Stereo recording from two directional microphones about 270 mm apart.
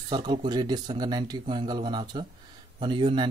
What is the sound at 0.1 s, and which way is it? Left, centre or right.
A man's voice, centre.